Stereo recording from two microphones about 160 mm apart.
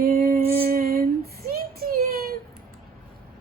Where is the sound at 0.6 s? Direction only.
65° right (ahead or behind).